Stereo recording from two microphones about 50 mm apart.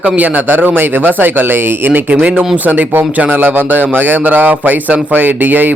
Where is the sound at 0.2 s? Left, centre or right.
Right.